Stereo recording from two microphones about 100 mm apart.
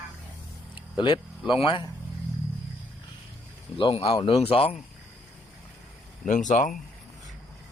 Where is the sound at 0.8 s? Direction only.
55° left (ahead or behind).